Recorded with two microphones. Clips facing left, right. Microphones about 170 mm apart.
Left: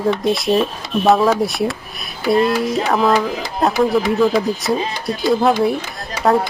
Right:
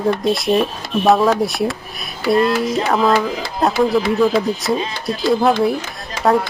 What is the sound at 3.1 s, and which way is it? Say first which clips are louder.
Speech: even; 15° left (ahead or behind).